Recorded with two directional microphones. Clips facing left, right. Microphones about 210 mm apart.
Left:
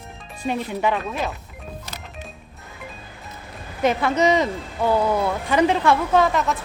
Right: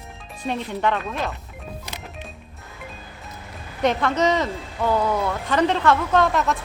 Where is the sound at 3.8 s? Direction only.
5° left (ahead or behind).